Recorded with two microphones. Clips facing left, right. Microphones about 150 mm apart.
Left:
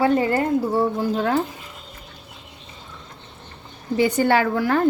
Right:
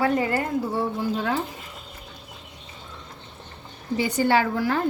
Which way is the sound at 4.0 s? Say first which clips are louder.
Left 3 dB; 55° left (ahead or behind).